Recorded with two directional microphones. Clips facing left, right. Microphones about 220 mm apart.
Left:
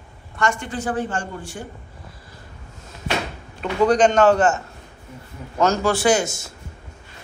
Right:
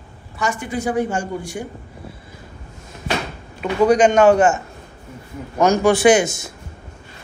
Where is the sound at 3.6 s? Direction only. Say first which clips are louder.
Right 2 dB; 10° right (ahead or behind).